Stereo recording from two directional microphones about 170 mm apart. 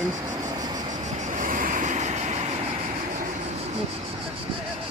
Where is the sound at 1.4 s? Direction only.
50° right (ahead or behind).